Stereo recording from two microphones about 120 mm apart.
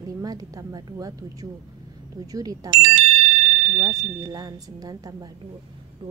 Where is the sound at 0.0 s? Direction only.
30° right (ahead or behind).